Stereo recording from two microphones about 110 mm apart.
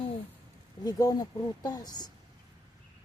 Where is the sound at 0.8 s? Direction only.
35° left (ahead or behind).